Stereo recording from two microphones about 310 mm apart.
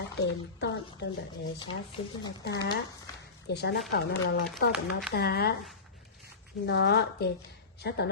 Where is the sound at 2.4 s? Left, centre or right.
Left.